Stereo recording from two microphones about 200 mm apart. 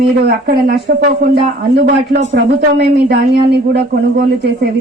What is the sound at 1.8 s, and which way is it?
A woman's voice, 55° right (ahead or behind).